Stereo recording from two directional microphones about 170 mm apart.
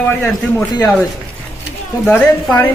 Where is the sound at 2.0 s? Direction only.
10° left (ahead or behind).